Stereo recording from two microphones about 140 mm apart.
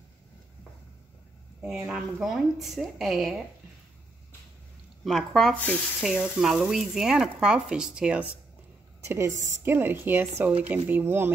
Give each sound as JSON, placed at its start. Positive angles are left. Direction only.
{"t": 1.9, "sound": "speech", "side_deg": -5}
{"t": 5.0, "sound": "speech", "side_deg": 0}
{"t": 6.0, "sound": "speech", "side_deg": -5}
{"t": 9.0, "sound": "a woman's voice", "side_deg": -20}